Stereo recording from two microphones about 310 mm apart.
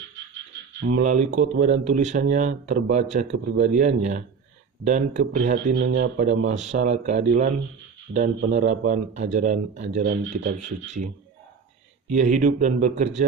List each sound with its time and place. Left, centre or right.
0.8 s speech: right
6.4 s speech: right
12.1 s speech: right